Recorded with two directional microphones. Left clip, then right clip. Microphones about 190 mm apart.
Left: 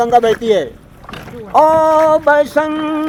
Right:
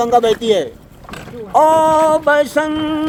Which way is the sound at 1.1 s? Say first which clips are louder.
Left 1 dB; 45° right (ahead or behind).